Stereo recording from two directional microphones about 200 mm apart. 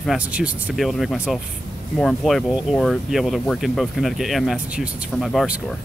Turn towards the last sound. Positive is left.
turn(degrees=0)  # may be behind; listen again after turning